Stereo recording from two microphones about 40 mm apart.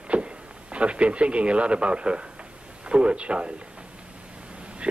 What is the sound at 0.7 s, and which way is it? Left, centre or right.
Speech, right.